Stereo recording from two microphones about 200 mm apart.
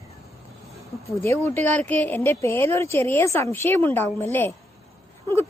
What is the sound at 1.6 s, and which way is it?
Speech, 35° right (ahead or behind).